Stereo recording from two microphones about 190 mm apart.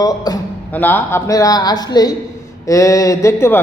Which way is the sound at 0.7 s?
10° left (ahead or behind).